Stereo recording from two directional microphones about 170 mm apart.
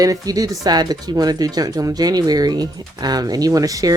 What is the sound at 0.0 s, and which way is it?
Speech, 20° right (ahead or behind).